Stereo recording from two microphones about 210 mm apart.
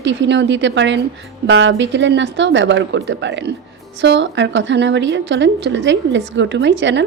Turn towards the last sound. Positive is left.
turn(degrees=-60)  # may be behind; listen again after turning